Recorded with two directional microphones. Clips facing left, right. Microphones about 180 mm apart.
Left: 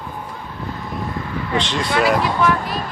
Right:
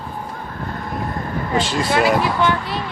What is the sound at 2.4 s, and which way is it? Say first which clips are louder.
Speech: left 1 dB; 30° right (ahead or behind).